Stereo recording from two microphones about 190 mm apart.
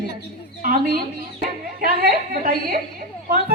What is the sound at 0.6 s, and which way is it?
A woman's voice, 45° right (ahead or behind).